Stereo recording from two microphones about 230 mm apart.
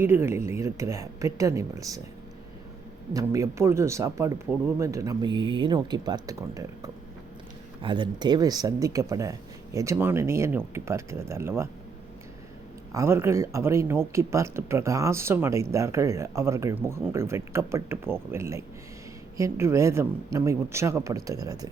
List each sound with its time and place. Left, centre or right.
0.0 s speech: centre
3.1 s speech: centre
12.9 s speech: centre